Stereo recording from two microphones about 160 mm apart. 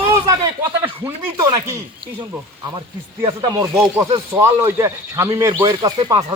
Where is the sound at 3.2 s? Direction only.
35° right (ahead or behind).